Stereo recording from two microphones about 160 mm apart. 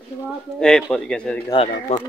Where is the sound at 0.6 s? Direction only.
5° left (ahead or behind).